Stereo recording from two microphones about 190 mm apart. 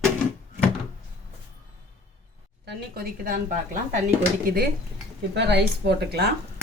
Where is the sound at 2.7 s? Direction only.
55° right (ahead or behind).